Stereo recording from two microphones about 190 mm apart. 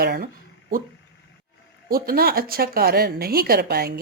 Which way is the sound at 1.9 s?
50° right (ahead or behind).